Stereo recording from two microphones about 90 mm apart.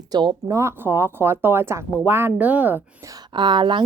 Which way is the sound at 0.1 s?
50° right (ahead or behind).